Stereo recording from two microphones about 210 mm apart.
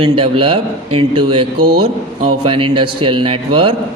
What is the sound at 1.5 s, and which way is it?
Speech, 45° right (ahead or behind).